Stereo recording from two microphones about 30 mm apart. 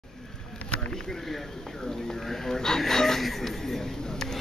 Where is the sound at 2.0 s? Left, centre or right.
Centre.